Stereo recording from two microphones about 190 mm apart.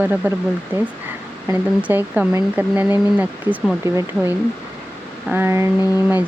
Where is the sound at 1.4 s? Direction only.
10° right (ahead or behind).